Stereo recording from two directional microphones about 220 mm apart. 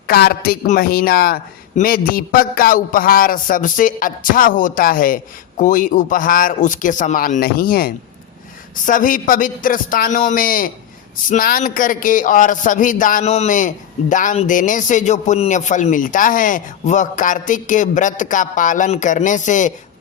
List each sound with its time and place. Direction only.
0.1 s a man's voice: 45° left (ahead or behind)